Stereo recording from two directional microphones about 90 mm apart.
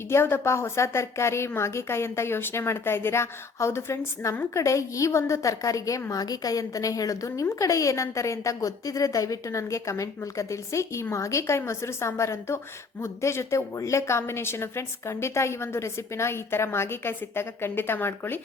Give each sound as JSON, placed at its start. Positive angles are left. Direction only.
{"t": 0.1, "sound": "a woman's voice", "side_deg": 25}